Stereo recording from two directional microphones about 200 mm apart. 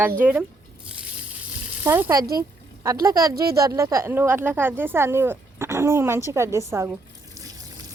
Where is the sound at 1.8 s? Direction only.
10° right (ahead or behind).